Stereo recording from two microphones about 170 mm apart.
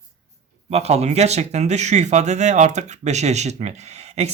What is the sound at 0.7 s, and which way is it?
Speech, 40° right (ahead or behind).